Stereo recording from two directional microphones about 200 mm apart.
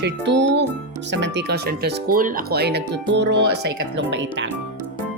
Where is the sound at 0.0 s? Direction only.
60° right (ahead or behind).